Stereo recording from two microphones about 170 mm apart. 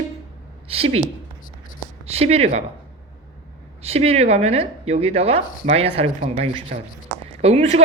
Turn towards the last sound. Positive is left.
turn(degrees=-35)  # may be behind; listen again after turning